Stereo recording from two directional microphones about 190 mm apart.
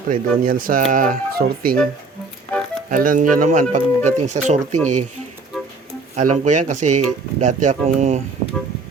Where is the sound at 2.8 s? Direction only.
45° right (ahead or behind).